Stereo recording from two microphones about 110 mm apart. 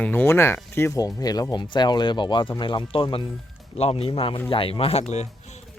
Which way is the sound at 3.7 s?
65° left (ahead or behind).